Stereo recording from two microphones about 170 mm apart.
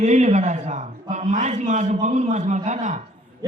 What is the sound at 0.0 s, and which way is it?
A woman's voice, 40° right (ahead or behind).